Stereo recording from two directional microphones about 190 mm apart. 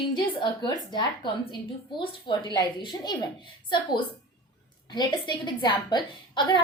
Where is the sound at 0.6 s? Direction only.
25° left (ahead or behind).